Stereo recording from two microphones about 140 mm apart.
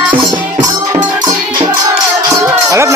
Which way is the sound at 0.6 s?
25° right (ahead or behind).